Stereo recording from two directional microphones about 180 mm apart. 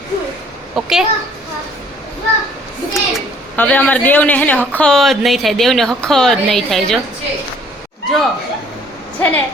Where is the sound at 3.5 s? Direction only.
10° left (ahead or behind).